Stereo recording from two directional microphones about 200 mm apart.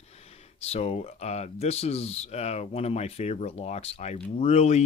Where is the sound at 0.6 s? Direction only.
30° left (ahead or behind).